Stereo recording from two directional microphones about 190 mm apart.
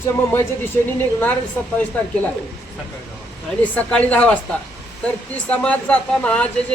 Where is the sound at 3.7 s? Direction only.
5° left (ahead or behind).